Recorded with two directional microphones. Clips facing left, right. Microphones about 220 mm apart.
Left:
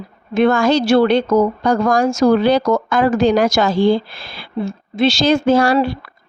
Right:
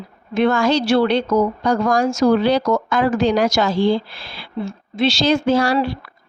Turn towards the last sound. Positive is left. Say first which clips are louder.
# left 3 dB
turn(degrees=50)  # may be behind; listen again after turning